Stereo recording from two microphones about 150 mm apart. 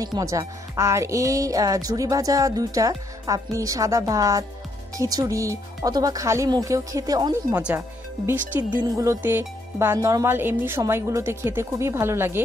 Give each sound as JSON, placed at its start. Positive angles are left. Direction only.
{"t": 0.0, "sound": "speech", "side_deg": -25}